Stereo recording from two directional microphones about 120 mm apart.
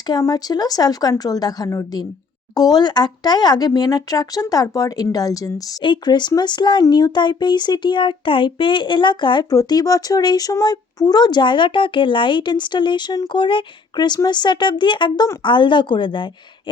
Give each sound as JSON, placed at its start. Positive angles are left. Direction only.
{"t": 0.1, "sound": "speech", "side_deg": 30}
{"t": 5.8, "sound": "speech", "side_deg": 40}